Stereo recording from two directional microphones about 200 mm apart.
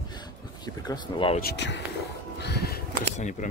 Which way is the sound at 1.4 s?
60° left (ahead or behind).